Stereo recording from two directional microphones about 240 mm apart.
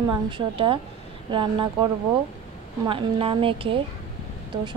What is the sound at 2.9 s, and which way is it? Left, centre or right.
Speech, right.